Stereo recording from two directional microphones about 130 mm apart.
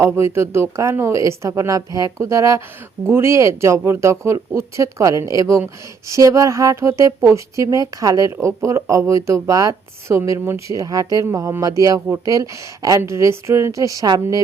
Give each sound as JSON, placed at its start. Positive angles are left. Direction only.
{"t": 0.0, "sound": "a woman's voice", "side_deg": -20}